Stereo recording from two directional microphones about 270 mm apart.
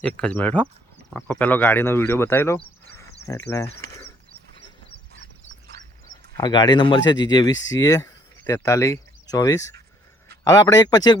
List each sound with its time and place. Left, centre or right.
0.0 s speech: centre
6.3 s speech: centre
7.5 s speech: left
7.8 s speech: centre